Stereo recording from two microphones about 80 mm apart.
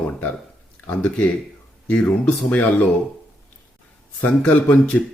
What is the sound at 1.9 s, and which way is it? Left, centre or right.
Speech, centre.